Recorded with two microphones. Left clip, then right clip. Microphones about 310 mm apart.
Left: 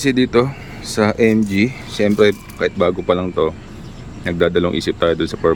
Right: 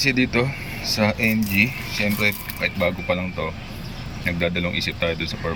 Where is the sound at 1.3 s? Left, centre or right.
Left.